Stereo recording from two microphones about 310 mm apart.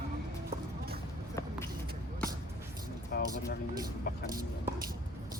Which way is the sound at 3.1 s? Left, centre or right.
Left.